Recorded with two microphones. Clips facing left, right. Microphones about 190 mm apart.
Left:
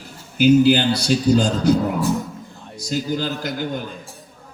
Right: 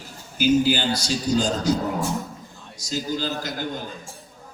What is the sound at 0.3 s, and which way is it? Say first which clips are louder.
Chant: left 6 dB; 65° left (ahead or behind).